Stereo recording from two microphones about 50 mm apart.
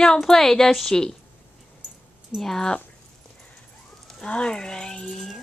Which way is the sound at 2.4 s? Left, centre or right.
Centre.